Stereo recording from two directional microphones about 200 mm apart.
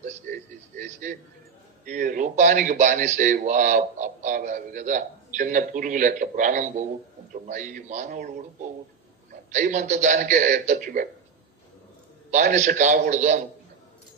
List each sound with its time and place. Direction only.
0.0 s a sound: 40° right (ahead or behind)
1.9 s a man's voice: 40° right (ahead or behind)
9.5 s a man's voice: 40° right (ahead or behind)
12.3 s a man's voice: 35° right (ahead or behind)